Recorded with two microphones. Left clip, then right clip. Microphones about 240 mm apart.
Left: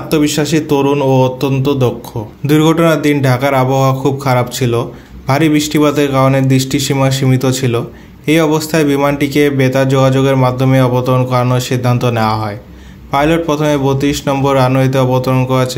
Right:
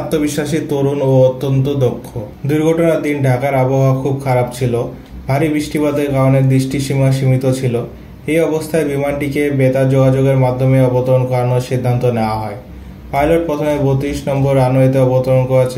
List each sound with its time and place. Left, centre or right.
0.1 s speech: left